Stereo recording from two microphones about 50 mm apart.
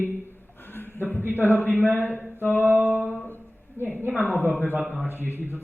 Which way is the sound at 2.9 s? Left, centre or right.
Left.